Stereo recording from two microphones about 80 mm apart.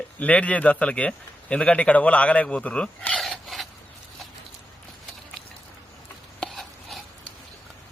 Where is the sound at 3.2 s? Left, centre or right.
Centre.